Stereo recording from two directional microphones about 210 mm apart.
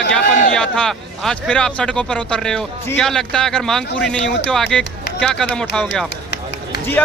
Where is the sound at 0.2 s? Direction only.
40° left (ahead or behind).